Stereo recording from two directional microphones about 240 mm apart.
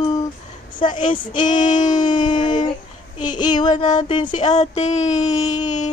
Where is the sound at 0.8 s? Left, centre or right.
Centre.